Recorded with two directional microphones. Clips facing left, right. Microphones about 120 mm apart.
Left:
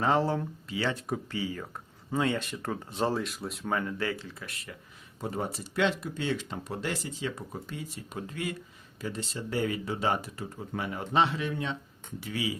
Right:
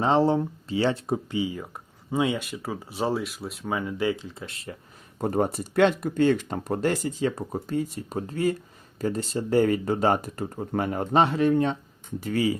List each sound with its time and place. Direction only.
0.0 s speech: 25° right (ahead or behind)
1.3 s speech: 15° right (ahead or behind)
5.2 s speech: 50° right (ahead or behind)